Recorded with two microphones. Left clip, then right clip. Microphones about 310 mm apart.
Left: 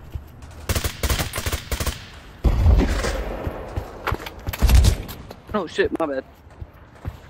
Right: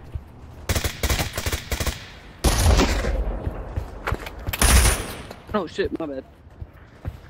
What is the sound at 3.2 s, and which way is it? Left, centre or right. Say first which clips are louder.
Music: left 4 dB; left.